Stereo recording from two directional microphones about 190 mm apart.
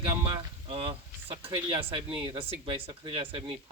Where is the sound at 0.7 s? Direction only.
30° right (ahead or behind).